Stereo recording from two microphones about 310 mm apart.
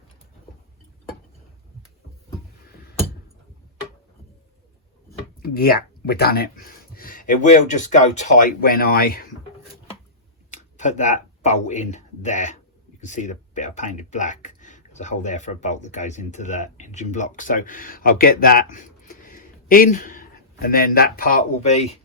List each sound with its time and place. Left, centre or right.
5.4 s speech: left
10.5 s speech: left